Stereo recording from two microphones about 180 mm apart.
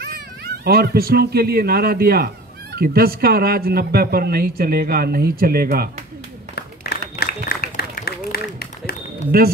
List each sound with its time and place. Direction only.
0.7 s speech: 60° right (ahead or behind)
6.5 s a sound: 60° left (ahead or behind)
9.3 s speech: 60° right (ahead or behind)